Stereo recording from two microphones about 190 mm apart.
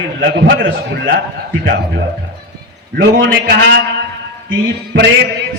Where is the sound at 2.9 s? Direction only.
50° right (ahead or behind).